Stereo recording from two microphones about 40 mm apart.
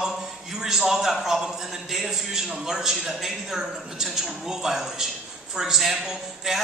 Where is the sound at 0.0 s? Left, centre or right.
Centre.